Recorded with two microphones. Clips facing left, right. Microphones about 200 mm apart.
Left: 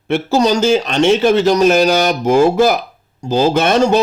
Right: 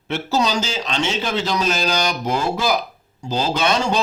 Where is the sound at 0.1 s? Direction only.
50° left (ahead or behind).